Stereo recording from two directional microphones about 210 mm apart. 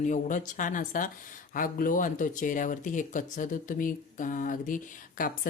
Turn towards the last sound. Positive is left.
turn(degrees=40)  # may be behind; listen again after turning